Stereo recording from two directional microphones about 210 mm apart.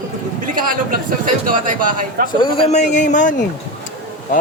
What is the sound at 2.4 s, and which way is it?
Speech, 35° left (ahead or behind).